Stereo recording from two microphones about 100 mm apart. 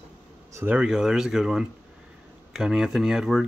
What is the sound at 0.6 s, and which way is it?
Speech, 10° right (ahead or behind).